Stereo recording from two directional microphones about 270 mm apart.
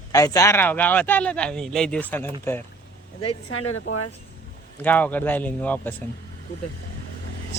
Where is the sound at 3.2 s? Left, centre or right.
Left.